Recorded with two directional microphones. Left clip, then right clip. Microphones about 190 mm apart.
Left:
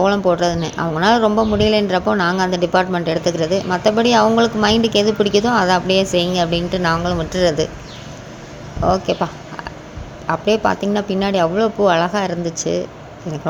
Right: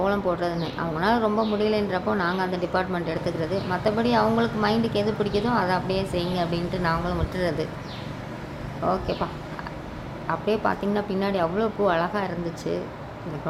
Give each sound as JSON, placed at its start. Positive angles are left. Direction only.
{"t": 0.0, "sound": "speech", "side_deg": 35}
{"t": 8.8, "sound": "speech", "side_deg": 30}